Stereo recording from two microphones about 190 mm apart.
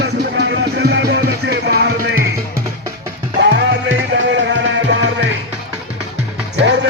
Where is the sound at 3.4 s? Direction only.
65° right (ahead or behind).